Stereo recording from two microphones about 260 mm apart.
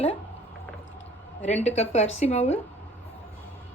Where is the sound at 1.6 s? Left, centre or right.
Left.